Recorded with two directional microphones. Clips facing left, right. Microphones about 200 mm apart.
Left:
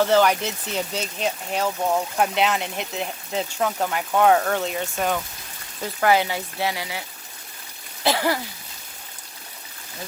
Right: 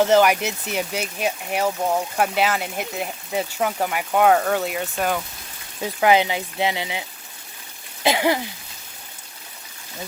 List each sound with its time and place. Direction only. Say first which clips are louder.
0.0 s speech: right 2 dB; 15° right (ahead or behind)
5.8 s speech: right 2 dB; 15° right (ahead or behind)
8.0 s speech: right 2 dB; 15° right (ahead or behind)